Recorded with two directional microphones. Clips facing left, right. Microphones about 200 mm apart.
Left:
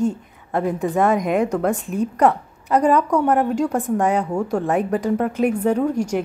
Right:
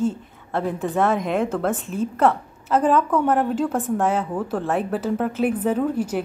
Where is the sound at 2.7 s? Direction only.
Centre (ahead or behind).